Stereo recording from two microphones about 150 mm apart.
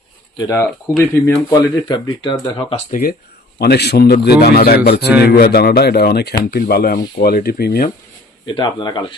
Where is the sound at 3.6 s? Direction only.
90° left.